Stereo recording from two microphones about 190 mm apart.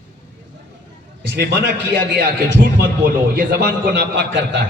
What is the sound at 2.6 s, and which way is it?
A man's voice, 50° right (ahead or behind).